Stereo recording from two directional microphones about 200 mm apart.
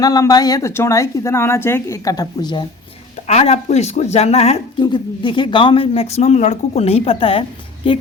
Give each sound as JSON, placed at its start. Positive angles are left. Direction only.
{"t": 0.0, "sound": "speech", "side_deg": 20}
{"t": 3.2, "sound": "speech", "side_deg": 30}